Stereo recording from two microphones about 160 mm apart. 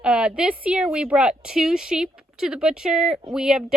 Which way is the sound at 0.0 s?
5° right (ahead or behind).